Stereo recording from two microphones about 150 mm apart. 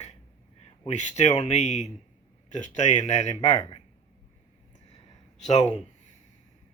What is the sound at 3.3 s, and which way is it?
Speech, 25° left (ahead or behind).